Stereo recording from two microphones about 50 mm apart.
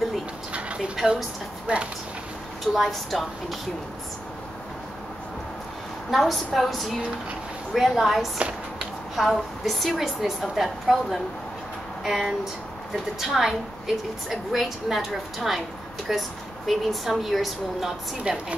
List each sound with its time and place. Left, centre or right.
0.5 s a sound: right
1.7 s speech: right
2.6 s a woman's voice: centre
6.0 s a woman's voice: centre
8.4 s a sound: right
9.1 s a woman's voice: centre
18.3 s a woman's voice: centre